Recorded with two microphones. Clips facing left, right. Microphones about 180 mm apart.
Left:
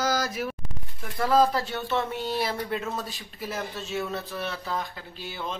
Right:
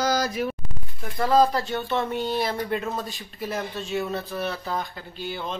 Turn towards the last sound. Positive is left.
turn(degrees=5)  # may be behind; listen again after turning